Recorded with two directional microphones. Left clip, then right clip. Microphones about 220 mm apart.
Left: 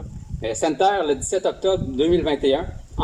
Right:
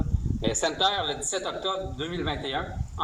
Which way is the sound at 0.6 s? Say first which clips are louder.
Left 7 dB; 25° left (ahead or behind).